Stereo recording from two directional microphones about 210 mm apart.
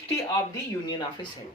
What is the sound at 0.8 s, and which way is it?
Speech, 20° left (ahead or behind).